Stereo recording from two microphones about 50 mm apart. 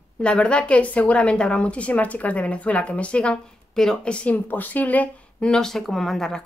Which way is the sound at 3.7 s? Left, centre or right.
Centre.